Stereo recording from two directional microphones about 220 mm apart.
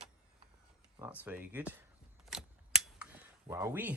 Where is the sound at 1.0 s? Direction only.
5° right (ahead or behind).